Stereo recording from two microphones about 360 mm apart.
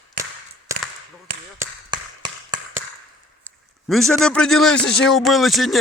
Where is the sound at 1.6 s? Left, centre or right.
Centre.